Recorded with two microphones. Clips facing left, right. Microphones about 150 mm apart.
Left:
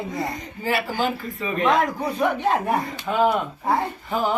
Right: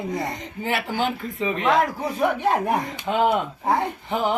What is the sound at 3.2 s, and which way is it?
Speech, 20° right (ahead or behind).